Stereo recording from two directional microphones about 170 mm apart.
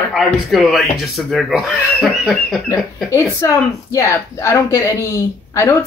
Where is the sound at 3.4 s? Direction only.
15° left (ahead or behind).